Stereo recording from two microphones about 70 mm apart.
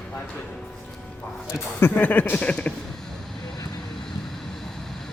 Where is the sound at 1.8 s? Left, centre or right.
Left.